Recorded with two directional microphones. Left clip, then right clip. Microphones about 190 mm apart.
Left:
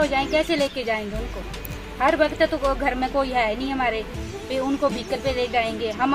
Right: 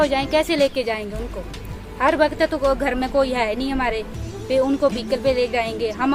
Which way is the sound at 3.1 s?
15° right (ahead or behind).